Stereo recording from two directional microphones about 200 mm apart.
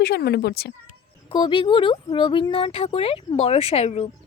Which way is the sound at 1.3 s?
25° left (ahead or behind).